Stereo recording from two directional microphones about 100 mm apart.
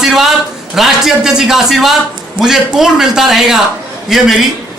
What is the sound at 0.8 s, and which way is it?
A man's voice, 5° right (ahead or behind).